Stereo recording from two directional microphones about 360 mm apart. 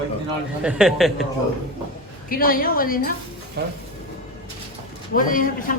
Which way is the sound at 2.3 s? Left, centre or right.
Left.